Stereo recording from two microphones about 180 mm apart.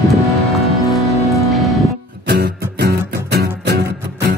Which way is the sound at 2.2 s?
65° right (ahead or behind).